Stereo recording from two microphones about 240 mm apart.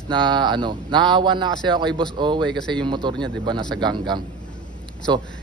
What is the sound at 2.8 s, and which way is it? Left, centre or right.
A man's voice, centre.